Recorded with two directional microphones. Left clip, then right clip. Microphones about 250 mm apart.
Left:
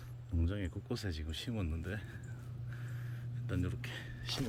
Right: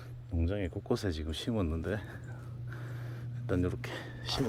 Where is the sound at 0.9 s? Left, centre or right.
Right.